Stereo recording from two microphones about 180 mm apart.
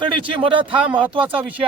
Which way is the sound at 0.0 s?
30° right (ahead or behind).